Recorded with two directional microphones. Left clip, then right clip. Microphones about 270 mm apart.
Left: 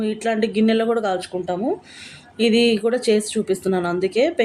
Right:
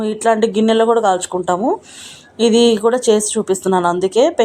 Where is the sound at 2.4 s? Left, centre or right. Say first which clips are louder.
Right 5 dB; centre.